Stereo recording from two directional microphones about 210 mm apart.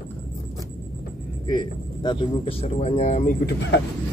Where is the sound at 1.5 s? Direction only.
20° left (ahead or behind).